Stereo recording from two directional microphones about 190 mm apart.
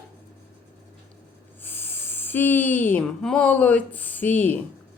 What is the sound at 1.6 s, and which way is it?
Speech, 10° left (ahead or behind).